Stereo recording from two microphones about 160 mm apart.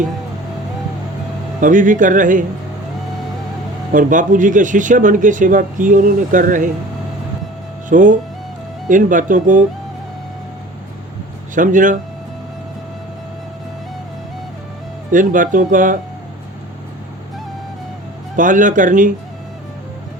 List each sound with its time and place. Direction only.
1.6 s a man's voice: 55° right (ahead or behind)
3.9 s a man's voice: 55° right (ahead or behind)
7.9 s a man's voice: 55° right (ahead or behind)
11.5 s a man's voice: 55° right (ahead or behind)
15.1 s a man's voice: 55° right (ahead or behind)
18.3 s a man's voice: 55° right (ahead or behind)